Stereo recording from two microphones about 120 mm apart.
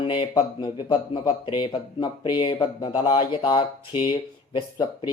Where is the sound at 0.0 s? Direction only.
40° left (ahead or behind).